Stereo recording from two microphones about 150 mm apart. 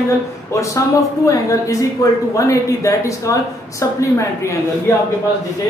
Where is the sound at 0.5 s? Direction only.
20° left (ahead or behind).